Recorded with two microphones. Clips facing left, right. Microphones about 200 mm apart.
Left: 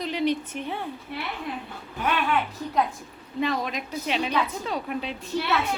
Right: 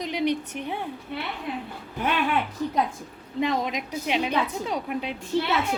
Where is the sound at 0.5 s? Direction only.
15° right (ahead or behind).